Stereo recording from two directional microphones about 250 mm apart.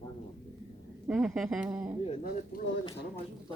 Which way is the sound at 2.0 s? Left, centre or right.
Left.